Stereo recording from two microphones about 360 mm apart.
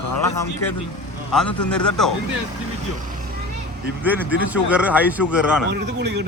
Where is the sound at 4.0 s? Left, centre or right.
Centre.